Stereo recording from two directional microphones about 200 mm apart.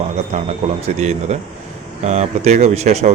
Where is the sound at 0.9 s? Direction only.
35° right (ahead or behind).